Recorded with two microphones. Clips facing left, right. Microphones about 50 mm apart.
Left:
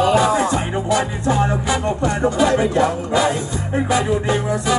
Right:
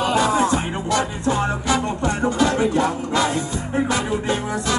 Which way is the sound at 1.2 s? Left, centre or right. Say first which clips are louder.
Left 2 dB; centre.